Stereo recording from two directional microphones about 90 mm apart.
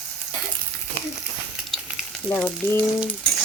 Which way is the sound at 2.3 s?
25° left (ahead or behind).